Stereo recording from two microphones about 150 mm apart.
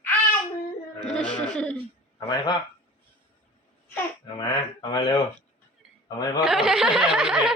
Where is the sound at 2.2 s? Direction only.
30° left (ahead or behind).